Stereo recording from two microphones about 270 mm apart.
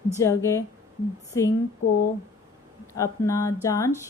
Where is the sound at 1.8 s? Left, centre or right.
Left.